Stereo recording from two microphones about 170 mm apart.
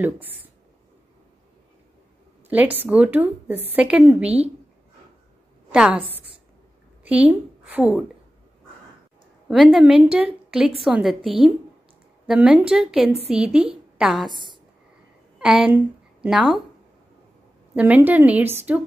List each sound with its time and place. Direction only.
0.0 s a woman's voice: 10° right (ahead or behind)
2.5 s a woman's voice: 10° right (ahead or behind)
5.7 s a woman's voice: 5° right (ahead or behind)
6.0 s a woman's voice: 35° right (ahead or behind)
7.1 s a woman's voice: 10° right (ahead or behind)
9.5 s a woman's voice: 5° right (ahead or behind)
14.3 s a woman's voice: 25° right (ahead or behind)
15.3 s a woman's voice: 5° right (ahead or behind)
17.7 s a woman's voice: 10° right (ahead or behind)